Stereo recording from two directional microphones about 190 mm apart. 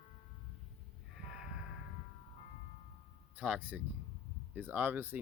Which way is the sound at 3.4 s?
10° right (ahead or behind).